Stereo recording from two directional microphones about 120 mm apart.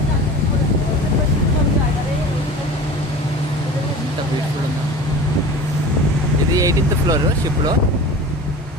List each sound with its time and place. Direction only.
6.5 s vehicle: 30° right (ahead or behind)